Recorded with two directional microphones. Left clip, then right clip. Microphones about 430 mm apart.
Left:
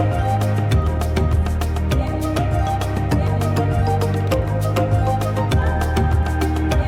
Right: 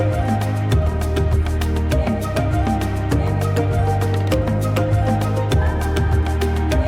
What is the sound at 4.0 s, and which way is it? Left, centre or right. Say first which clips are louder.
Music: even; centre.